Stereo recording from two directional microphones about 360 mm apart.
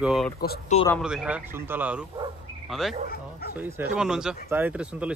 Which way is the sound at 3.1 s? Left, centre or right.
Left.